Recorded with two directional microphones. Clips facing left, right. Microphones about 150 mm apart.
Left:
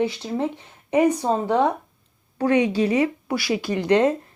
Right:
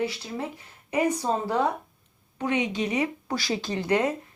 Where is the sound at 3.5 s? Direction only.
20° left (ahead or behind).